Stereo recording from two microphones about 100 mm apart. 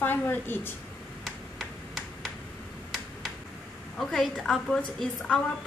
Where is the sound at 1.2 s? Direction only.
Centre (ahead or behind).